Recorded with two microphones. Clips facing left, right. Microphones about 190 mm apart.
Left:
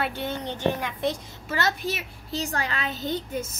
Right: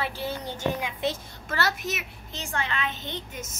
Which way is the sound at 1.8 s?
35° left (ahead or behind).